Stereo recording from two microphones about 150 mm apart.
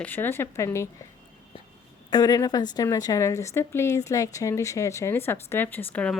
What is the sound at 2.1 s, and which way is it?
A woman's voice, 25° left (ahead or behind).